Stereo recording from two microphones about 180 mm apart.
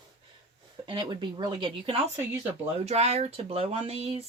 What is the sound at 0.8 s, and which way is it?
Speech, 25° right (ahead or behind).